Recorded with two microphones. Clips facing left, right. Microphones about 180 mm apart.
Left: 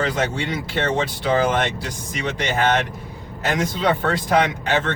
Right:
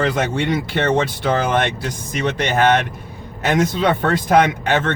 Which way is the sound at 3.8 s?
55° right (ahead or behind).